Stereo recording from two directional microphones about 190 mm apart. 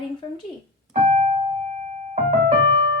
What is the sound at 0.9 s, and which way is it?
Keyboard, 40° right (ahead or behind).